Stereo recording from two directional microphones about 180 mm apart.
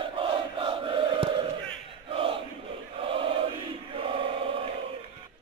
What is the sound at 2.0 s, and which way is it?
Chant, 30° right (ahead or behind).